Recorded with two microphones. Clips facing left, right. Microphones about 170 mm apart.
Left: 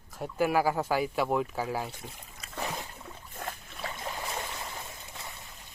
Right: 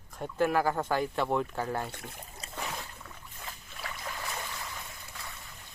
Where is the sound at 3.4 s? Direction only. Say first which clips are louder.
Left 7 dB; 55° left (ahead or behind).